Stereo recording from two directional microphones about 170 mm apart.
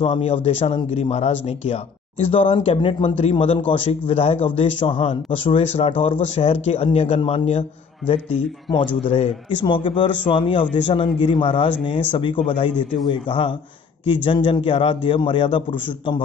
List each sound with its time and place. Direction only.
0.0 s a man's voice: 35° left (ahead or behind)